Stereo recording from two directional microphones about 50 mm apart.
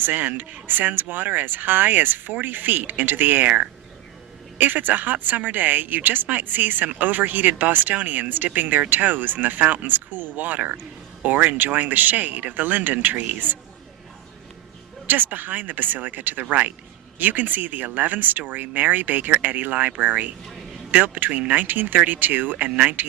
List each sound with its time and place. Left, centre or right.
0.0 s a woman's voice: right
4.5 s a woman's voice: right
15.0 s a woman's voice: right